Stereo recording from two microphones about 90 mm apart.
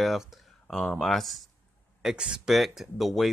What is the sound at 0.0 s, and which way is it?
Speech, 5° right (ahead or behind).